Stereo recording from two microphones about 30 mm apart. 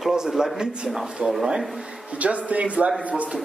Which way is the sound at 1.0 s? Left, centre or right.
Right.